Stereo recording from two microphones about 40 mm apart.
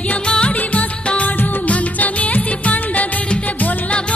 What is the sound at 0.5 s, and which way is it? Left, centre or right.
Music, left.